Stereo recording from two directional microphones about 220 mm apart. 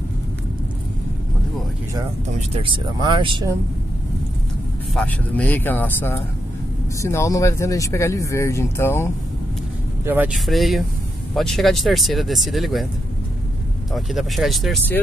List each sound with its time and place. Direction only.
2.5 s speech: 25° right (ahead or behind)
4.9 s speech: 5° left (ahead or behind)
10.0 s speech: 5° right (ahead or behind)
13.9 s speech: centre (ahead or behind)